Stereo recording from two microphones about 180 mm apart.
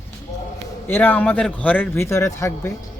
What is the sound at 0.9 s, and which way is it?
Speech, 10° left (ahead or behind).